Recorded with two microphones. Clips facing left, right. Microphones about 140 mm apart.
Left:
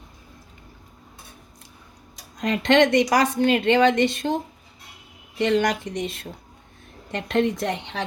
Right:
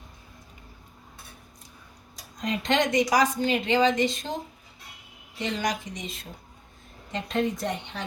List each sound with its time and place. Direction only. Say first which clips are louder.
2.4 s a woman's voice: left 7 dB; 70° left (ahead or behind)
5.4 s a woman's voice: left 8 dB; 65° left (ahead or behind); by 8.0 s 90° left